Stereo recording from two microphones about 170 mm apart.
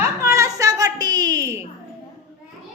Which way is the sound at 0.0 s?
15° right (ahead or behind).